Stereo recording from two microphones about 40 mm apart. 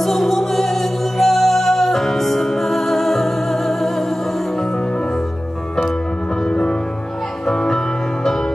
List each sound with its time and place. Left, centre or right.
0.0 s music: centre
6.5 s music: left